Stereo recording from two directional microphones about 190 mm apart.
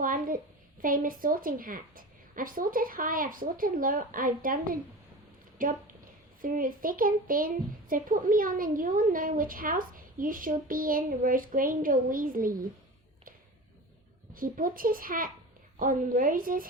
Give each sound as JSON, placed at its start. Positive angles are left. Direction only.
{"t": 0.0, "sound": "a child's voice", "side_deg": -45}
{"t": 14.3, "sound": "a child's voice", "side_deg": -45}